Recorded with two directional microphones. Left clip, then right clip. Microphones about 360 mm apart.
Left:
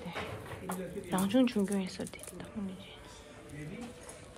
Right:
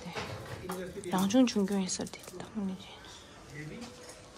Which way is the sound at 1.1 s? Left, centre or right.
Centre.